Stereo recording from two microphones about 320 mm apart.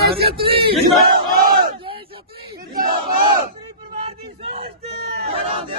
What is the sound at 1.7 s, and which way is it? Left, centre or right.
Battle cry, centre.